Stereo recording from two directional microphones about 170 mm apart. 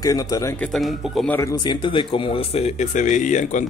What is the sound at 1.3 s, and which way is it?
A man's voice, 20° left (ahead or behind).